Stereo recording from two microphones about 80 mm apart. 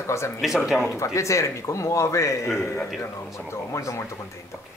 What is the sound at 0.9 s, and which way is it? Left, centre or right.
Speech, left.